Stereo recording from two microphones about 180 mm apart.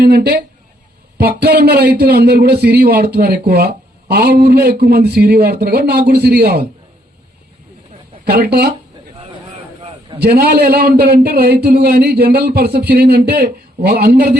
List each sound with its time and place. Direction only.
0.0 s a man's voice: 60° right (ahead or behind)
8.2 s a man's voice: 65° right (ahead or behind)
10.2 s a man's voice: 60° right (ahead or behind)